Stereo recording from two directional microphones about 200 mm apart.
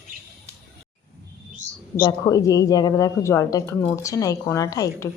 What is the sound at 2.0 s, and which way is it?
A woman's voice, 15° left (ahead or behind).